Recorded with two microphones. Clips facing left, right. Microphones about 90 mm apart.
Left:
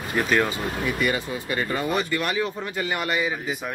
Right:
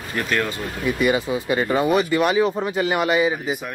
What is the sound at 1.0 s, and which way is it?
Speech, 15° right (ahead or behind).